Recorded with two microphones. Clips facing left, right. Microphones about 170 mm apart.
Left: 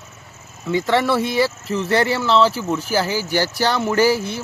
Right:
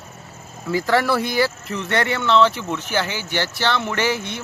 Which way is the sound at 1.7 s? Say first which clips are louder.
Left 4 dB; 30° left (ahead or behind).